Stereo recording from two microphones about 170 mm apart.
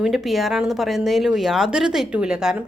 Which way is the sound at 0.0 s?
Centre (ahead or behind).